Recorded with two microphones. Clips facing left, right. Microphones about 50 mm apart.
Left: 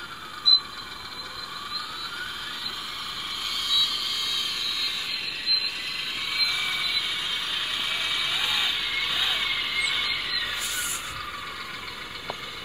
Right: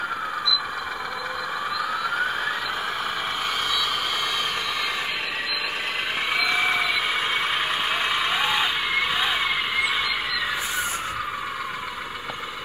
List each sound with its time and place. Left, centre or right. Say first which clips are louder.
0.5 s vehicle: left 3 dB; right
6.3 s vehicle: right 7 dB; right